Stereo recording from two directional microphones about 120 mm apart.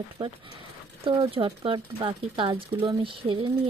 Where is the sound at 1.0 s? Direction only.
50° right (ahead or behind).